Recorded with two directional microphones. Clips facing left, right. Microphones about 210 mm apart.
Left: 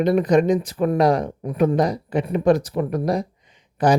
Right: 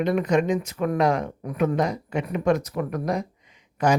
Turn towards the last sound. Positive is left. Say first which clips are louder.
# left 4 dB
turn(degrees=30)  # may be behind; listen again after turning